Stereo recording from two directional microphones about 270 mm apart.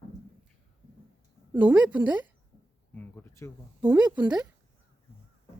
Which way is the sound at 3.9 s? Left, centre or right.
Centre.